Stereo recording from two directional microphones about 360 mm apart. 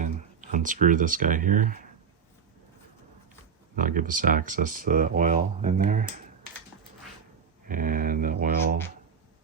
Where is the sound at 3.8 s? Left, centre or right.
Right.